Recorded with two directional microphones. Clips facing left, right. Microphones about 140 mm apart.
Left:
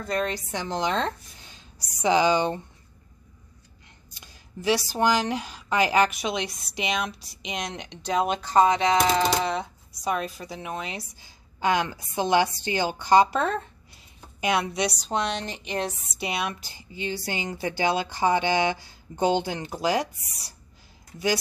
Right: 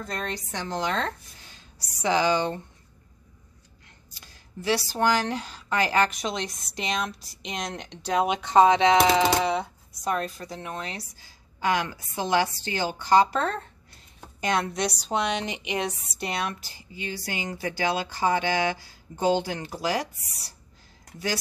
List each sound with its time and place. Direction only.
0.0 s a woman's voice: 5° left (ahead or behind)
4.1 s a woman's voice: 15° left (ahead or behind); by 8.4 s 5° right (ahead or behind)
8.4 s speech: 25° right (ahead or behind)
9.4 s speech: 5° right (ahead or behind)
10.0 s a woman's voice: 5° left (ahead or behind); by 15.8 s 15° right (ahead or behind)
16.2 s a woman's voice: 10° left (ahead or behind)